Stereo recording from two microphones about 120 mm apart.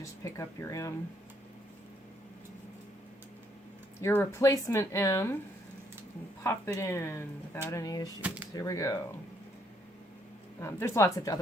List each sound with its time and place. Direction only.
0.0 s speech: 25° left (ahead or behind)
4.0 s speech: 20° left (ahead or behind)
6.4 s speech: 25° left (ahead or behind)
10.6 s speech: 25° left (ahead or behind)